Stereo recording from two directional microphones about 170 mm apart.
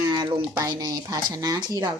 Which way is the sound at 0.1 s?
25° right (ahead or behind).